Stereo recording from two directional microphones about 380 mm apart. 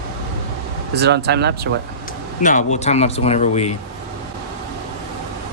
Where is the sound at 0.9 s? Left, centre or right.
Right.